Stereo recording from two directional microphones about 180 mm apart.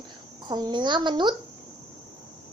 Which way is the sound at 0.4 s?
25° right (ahead or behind).